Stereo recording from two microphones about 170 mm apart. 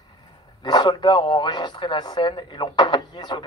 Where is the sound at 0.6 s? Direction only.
25° left (ahead or behind).